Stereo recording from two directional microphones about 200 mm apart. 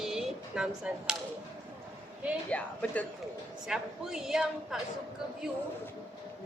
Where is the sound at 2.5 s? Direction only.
5° left (ahead or behind).